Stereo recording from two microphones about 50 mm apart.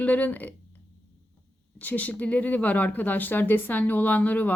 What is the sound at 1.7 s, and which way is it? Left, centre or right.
A woman's voice, left.